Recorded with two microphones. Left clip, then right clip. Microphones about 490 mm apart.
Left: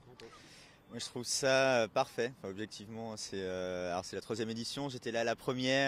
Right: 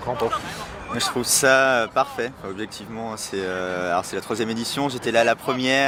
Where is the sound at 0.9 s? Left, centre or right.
Left.